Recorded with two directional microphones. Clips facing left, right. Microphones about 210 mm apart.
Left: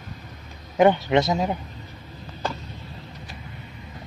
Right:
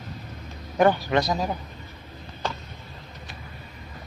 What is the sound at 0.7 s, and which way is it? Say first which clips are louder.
Speech: left 3 dB; 20° left (ahead or behind).